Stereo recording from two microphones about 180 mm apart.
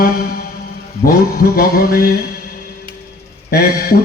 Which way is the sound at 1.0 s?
55° left (ahead or behind).